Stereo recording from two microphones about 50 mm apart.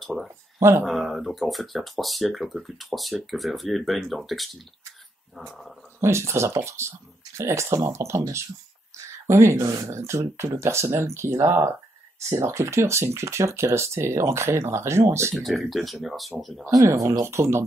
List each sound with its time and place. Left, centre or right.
0.6 s speech: right
0.8 s speech: centre
5.9 s speech: right
15.3 s speech: centre
16.6 s speech: right